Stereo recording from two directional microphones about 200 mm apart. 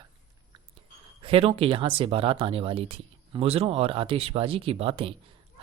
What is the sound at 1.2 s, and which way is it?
Speech, 30° right (ahead or behind).